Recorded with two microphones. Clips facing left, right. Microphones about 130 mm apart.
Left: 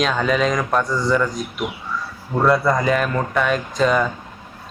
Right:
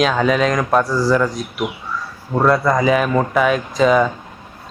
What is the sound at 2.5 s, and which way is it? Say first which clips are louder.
Speech: right 2 dB; centre (ahead or behind).